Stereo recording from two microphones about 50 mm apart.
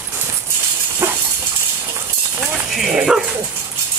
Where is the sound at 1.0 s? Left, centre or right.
Right.